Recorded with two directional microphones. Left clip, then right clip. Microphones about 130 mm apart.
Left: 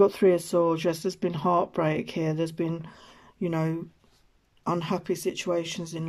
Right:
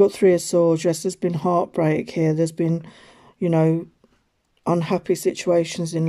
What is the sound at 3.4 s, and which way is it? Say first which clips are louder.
Speech: right 10 dB; 30° right (ahead or behind).